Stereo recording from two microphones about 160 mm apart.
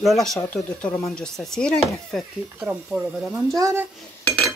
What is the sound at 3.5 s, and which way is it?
Speech, 20° right (ahead or behind).